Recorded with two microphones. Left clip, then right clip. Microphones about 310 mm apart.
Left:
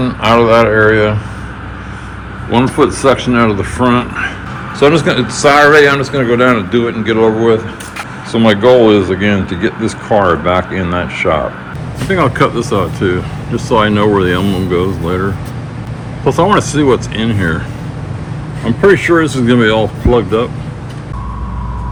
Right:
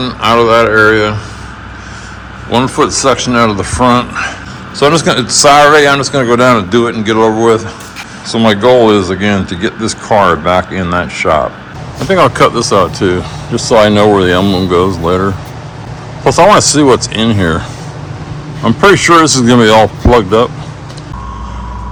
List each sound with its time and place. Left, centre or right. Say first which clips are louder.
0.0 s speech: right 1 dB; centre
2.5 s speech: right 1 dB; centre
16.7 s speech: right 4 dB; centre
18.6 s speech: right 3 dB; right